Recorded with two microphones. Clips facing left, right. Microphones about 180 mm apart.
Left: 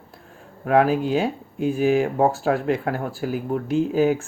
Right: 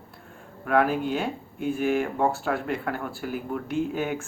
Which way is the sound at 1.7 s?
40° left (ahead or behind).